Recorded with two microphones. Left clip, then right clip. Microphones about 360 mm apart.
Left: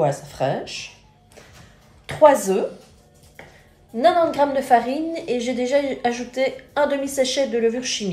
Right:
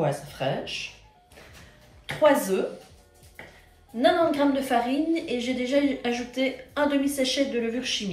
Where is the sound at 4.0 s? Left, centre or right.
Centre.